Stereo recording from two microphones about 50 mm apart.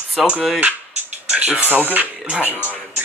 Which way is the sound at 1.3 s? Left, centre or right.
Right.